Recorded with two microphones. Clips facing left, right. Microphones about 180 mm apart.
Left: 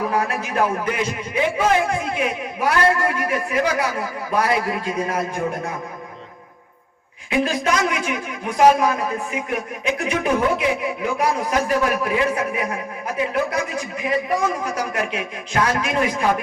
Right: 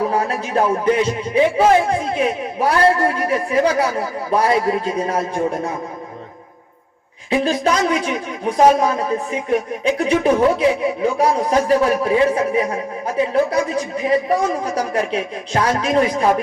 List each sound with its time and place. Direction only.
0.1 s a man's voice: 30° right (ahead or behind)
7.3 s a man's voice: 30° right (ahead or behind)